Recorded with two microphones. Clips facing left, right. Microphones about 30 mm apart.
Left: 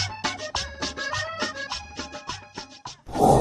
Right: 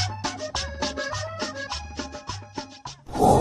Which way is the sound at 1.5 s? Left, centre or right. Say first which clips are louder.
Even; centre.